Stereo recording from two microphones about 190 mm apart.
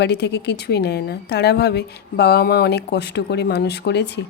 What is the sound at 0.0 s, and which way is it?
A woman's voice, 60° left (ahead or behind).